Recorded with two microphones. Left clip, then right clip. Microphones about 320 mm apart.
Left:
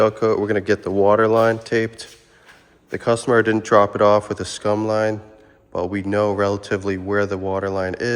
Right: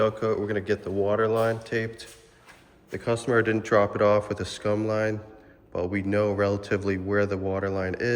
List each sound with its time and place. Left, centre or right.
0.0 s speech: centre
2.9 s speech: centre